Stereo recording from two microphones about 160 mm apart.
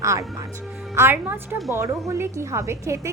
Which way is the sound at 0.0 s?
20° right (ahead or behind).